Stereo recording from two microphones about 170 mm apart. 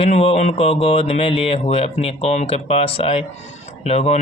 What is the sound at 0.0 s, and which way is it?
Speech, 35° left (ahead or behind).